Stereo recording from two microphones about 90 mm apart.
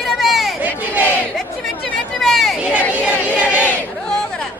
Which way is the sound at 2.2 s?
5° left (ahead or behind).